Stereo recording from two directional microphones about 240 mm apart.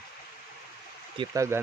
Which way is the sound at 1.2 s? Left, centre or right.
Centre.